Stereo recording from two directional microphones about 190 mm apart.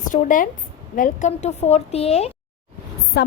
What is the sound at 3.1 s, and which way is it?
Speech, 60° left (ahead or behind).